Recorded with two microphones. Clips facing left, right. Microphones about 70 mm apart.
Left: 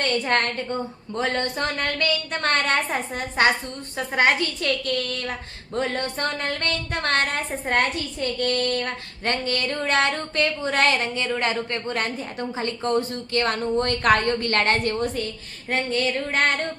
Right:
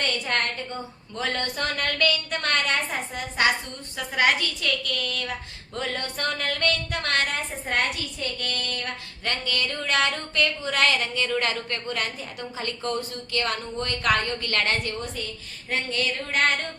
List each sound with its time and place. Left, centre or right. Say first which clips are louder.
0.0 s a woman's voice: left 4 dB; left
1.2 s a woman's voice: left 3 dB; left
15.7 s a woman's voice: left 4 dB; left